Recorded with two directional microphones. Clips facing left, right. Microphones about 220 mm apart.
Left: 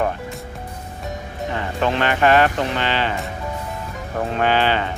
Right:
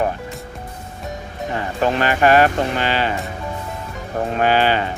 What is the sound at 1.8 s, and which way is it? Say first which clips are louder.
Speech: right 2 dB; 40° right (ahead or behind).